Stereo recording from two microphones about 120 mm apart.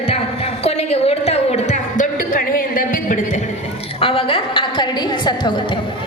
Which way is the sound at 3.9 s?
50° left (ahead or behind).